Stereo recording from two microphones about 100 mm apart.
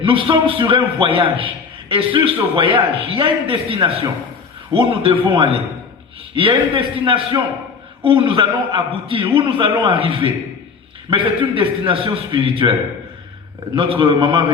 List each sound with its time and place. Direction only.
0.0 s a man's voice: 60° right (ahead or behind)
13.7 s a man's voice: 70° right (ahead or behind)